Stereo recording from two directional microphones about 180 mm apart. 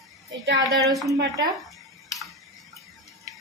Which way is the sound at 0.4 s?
65° right (ahead or behind).